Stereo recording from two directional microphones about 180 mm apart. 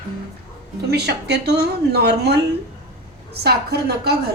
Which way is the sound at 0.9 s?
65° right (ahead or behind).